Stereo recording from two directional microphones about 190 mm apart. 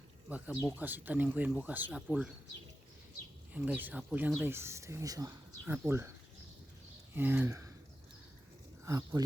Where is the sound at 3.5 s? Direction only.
10° right (ahead or behind).